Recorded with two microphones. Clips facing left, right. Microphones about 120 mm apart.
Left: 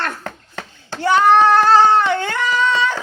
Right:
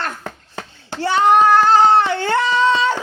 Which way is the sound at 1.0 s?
30° right (ahead or behind).